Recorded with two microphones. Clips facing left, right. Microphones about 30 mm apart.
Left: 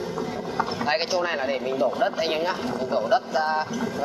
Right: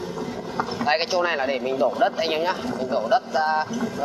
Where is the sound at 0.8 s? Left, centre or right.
Centre.